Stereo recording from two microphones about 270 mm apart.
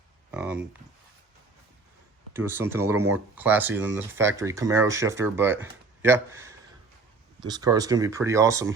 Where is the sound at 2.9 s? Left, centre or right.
Right.